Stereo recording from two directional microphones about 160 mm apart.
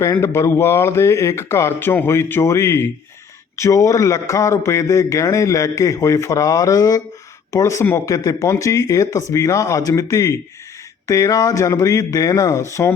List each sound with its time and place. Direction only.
0.0 s speech: 15° left (ahead or behind)